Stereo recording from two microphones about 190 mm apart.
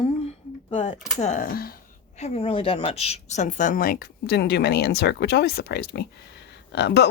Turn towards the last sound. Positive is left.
turn(degrees=60)  # may be behind; listen again after turning